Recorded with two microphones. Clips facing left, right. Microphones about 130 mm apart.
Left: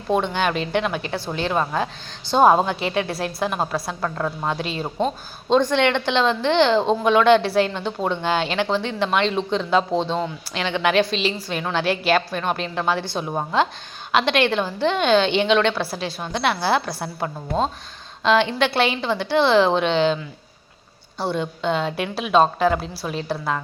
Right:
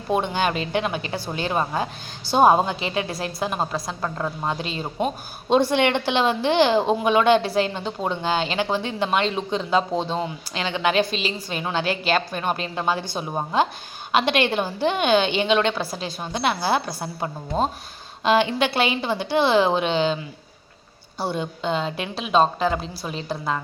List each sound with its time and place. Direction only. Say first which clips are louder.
0.1 s speech: left 1 dB; 5° right (ahead or behind)
3.0 s a woman's voice: left 3 dB; 60° left (ahead or behind)
3.4 s speech: left 1 dB; centre (ahead or behind)
4.0 s a woman's voice: left 1 dB; 10° right (ahead or behind)
4.6 s a woman's voice: left 2 dB; centre (ahead or behind)
21.2 s speech: left 2 dB; centre (ahead or behind)